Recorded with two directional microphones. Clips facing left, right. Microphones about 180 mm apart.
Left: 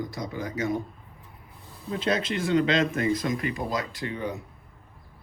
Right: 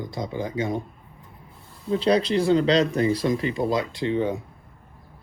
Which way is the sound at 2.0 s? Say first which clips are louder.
Right 6 dB; 35° right (ahead or behind).